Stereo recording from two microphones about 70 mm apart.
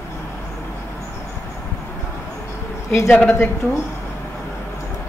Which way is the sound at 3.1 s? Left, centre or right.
Left.